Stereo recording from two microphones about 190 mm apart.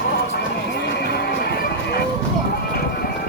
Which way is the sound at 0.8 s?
60° left (ahead or behind).